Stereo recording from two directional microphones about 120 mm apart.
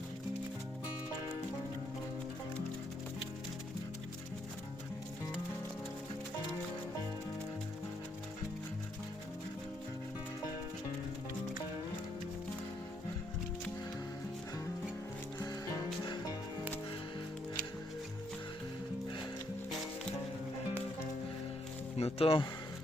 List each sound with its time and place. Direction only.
15.4 s music: 30° left (ahead or behind)
21.9 s speech: 55° left (ahead or behind)